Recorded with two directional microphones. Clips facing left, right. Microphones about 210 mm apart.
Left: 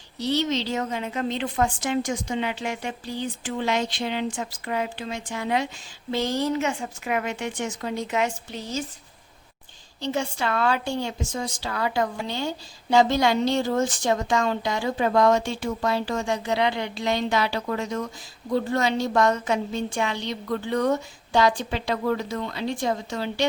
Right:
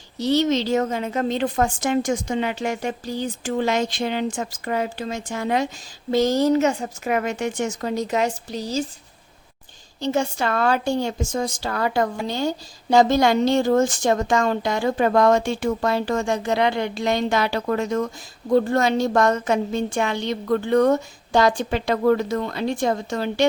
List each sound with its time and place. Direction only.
0.2 s a woman's voice: 45° right (ahead or behind)
10.0 s a woman's voice: 45° right (ahead or behind)